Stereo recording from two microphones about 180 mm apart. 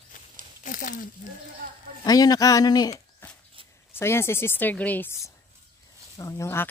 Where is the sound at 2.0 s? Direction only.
20° left (ahead or behind).